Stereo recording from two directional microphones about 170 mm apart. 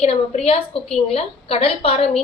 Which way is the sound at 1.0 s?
35° left (ahead or behind).